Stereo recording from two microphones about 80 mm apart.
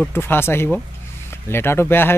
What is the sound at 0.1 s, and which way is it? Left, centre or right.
Speech, left.